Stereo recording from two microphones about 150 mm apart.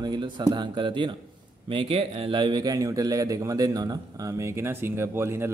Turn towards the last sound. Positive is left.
turn(degrees=-15)  # may be behind; listen again after turning